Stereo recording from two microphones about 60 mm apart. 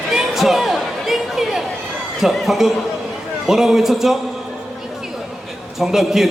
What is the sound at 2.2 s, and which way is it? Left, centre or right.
A man's voice, centre.